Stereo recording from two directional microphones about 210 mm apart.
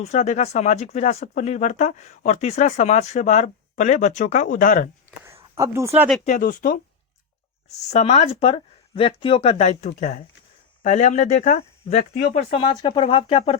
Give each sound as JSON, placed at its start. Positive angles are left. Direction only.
{"t": 0.0, "sound": "speech", "side_deg": 30}
{"t": 5.5, "sound": "speech", "side_deg": -15}
{"t": 6.2, "sound": "speech", "side_deg": 40}
{"t": 7.9, "sound": "speech", "side_deg": 30}